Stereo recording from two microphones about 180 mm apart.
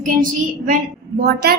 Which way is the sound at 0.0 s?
50° right (ahead or behind).